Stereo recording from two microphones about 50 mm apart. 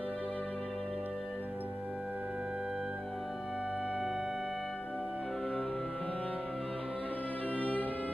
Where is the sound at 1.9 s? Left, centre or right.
Right.